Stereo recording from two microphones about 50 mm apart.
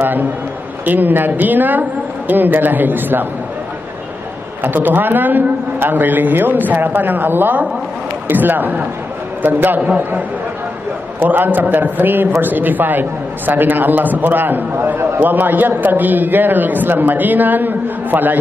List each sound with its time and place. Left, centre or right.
0.0 s a man's voice: right
4.6 s a man's voice: right
11.2 s a man's voice: right